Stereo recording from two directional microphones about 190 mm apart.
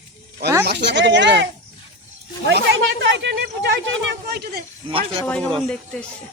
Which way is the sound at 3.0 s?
65° right (ahead or behind).